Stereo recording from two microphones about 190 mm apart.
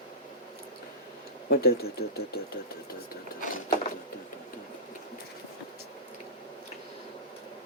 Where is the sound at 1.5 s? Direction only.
55° left (ahead or behind).